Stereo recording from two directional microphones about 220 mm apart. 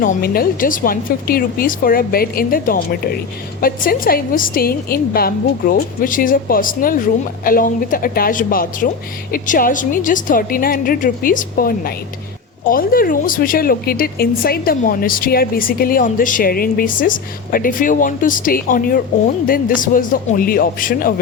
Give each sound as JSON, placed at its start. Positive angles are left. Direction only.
{"t": 0.0, "sound": "a woman's voice", "side_deg": 40}